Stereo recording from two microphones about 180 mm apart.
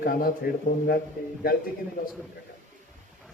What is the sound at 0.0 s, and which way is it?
Speech, 55° left (ahead or behind).